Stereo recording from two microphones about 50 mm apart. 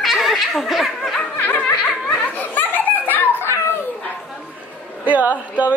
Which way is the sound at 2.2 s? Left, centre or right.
Left.